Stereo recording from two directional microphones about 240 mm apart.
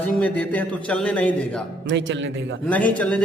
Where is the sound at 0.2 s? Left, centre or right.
Centre.